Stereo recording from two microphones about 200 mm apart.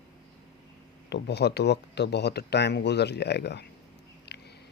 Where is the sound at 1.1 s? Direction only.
55° left (ahead or behind).